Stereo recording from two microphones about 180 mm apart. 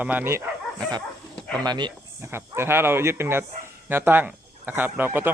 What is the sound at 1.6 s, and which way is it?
Speech, 25° right (ahead or behind).